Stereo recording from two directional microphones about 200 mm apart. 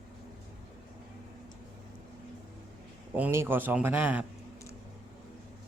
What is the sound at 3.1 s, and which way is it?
A man's voice, 10° right (ahead or behind).